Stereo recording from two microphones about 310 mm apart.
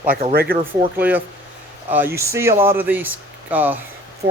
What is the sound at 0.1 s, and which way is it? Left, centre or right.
Speech, right.